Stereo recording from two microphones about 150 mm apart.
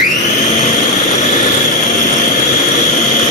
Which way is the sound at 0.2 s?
50° left (ahead or behind).